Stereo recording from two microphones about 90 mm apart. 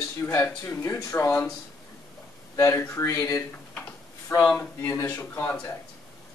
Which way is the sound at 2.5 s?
35° left (ahead or behind).